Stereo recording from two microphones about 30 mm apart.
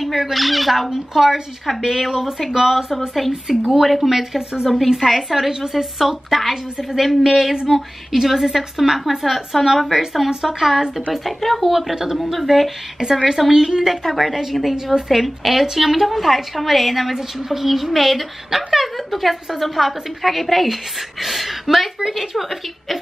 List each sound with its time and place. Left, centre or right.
0.0 s speech: centre
7.6 s speech: centre
12.2 s speech: centre
13.0 s speech: centre
14.0 s speech: centre